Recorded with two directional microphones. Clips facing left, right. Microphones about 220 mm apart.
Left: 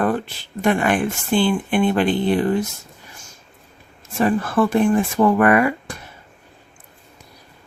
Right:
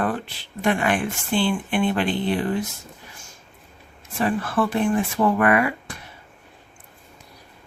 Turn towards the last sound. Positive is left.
turn(degrees=45)  # may be behind; listen again after turning